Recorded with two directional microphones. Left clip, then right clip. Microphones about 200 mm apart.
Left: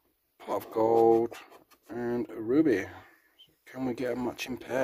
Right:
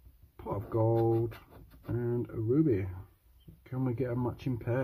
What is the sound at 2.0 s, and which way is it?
Speech, 45° left (ahead or behind).